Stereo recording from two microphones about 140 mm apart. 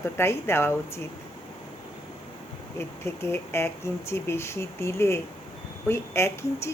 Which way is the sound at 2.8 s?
15° left (ahead or behind).